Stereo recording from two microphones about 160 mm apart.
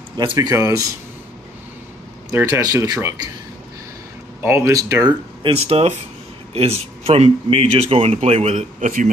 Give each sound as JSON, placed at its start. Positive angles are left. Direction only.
{"t": 0.2, "sound": "speech", "side_deg": -25}
{"t": 2.3, "sound": "speech", "side_deg": -15}
{"t": 4.4, "sound": "speech", "side_deg": -15}
{"t": 5.4, "sound": "speech", "side_deg": -40}